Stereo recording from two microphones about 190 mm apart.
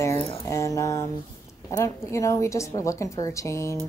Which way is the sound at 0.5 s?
15° left (ahead or behind).